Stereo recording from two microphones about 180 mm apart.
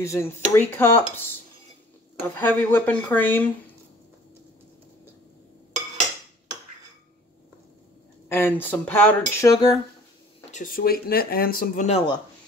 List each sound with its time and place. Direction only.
0.0 s speech: 15° left (ahead or behind)
2.3 s speech: 10° left (ahead or behind)
8.3 s speech: 10° left (ahead or behind)
10.5 s speech: 50° left (ahead or behind)